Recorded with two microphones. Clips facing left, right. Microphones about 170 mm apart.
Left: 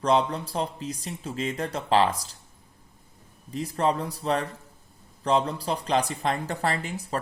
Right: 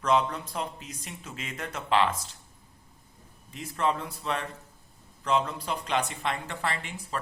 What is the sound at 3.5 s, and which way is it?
Speech, 35° left (ahead or behind).